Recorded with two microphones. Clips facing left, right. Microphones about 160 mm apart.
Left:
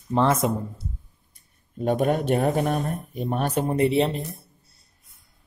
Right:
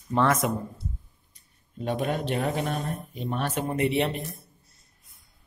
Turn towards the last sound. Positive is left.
turn(degrees=30)  # may be behind; listen again after turning